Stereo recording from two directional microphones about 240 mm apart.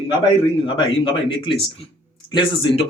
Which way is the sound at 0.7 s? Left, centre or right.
Left.